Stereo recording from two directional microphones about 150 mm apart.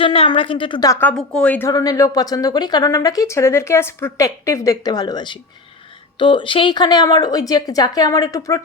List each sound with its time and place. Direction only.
0.0 s speech: 35° left (ahead or behind)
0.9 s speech: 10° left (ahead or behind)
1.7 s a woman's voice: 25° left (ahead or behind)